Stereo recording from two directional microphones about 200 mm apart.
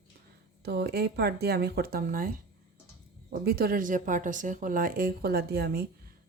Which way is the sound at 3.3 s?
50° right (ahead or behind).